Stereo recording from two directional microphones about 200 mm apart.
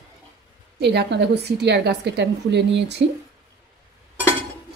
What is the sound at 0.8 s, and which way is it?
A woman's voice, 55° right (ahead or behind).